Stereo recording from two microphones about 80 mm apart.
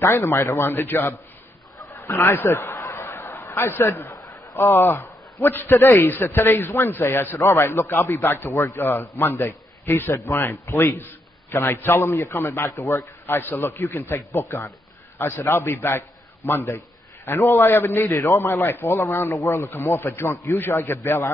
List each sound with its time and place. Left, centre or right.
0.0 s a man's voice: left
2.1 s snicker: left
3.7 s a man's voice: left
4.1 s a sound: left
4.7 s a man's voice: left
5.7 s a man's voice: left